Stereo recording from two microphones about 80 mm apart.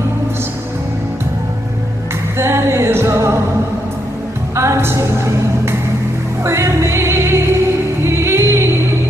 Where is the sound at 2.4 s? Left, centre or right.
Right.